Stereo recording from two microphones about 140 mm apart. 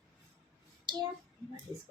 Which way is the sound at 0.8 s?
30° right (ahead or behind).